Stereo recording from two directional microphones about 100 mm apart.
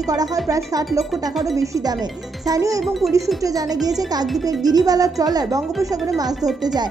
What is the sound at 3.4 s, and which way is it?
A woman's voice, 35° right (ahead or behind).